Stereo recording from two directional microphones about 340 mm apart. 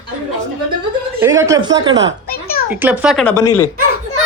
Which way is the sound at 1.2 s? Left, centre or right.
Centre.